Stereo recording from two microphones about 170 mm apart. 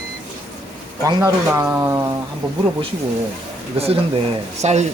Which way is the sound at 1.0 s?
15° right (ahead or behind).